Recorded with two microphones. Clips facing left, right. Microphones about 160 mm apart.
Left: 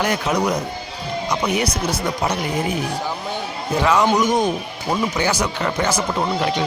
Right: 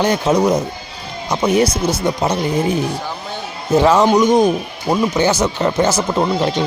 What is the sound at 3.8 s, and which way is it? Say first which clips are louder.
Speech: right 5 dB; 25° right (ahead or behind).